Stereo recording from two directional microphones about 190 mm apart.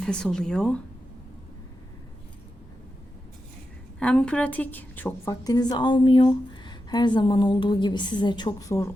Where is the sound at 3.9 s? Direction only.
5° left (ahead or behind).